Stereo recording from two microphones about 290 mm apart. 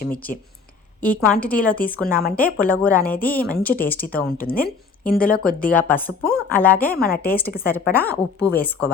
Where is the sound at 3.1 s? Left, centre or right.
Left.